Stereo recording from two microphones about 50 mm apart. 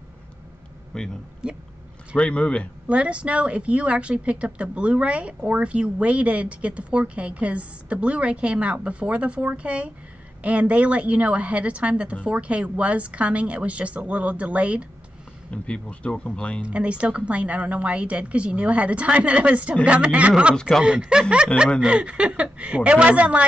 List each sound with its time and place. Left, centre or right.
0.9 s speech: centre
1.4 s speech: centre
2.1 s speech: left
2.9 s a woman's voice: right
15.5 s speech: left
16.6 s a woman's voice: right